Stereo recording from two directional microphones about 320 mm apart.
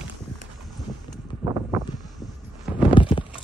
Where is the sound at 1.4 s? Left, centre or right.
Centre.